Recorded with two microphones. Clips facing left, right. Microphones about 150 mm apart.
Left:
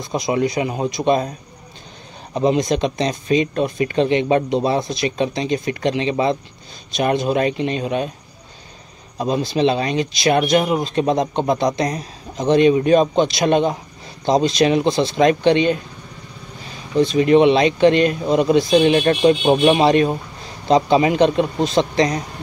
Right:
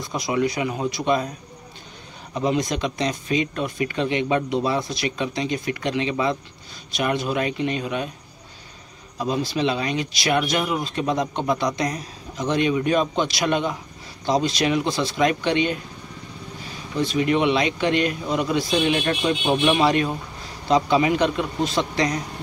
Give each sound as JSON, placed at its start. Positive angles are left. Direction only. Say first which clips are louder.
{"t": 0.1, "sound": "speech", "louder": "left 4 dB", "side_deg": 25}
{"t": 2.3, "sound": "speech", "louder": "left 5 dB", "side_deg": 25}
{"t": 9.2, "sound": "speech", "louder": "left 5 dB", "side_deg": 25}
{"t": 16.9, "sound": "speech", "louder": "left 7 dB", "side_deg": 25}
{"t": 18.8, "sound": "speech", "louder": "left 7 dB", "side_deg": 40}